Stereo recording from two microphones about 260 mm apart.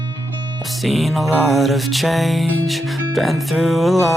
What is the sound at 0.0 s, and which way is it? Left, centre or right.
Music, centre.